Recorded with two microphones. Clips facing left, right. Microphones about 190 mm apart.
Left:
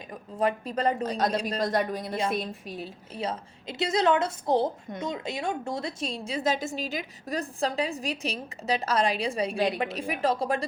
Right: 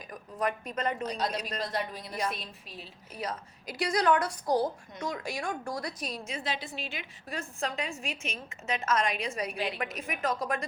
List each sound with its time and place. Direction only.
0.1 s a woman's voice: 30° left (ahead or behind)
1.0 s a woman's voice: 50° left (ahead or behind)
1.4 s a woman's voice: 30° left (ahead or behind)
1.6 s a woman's voice: 50° left (ahead or behind)
3.2 s a woman's voice: 25° left (ahead or behind)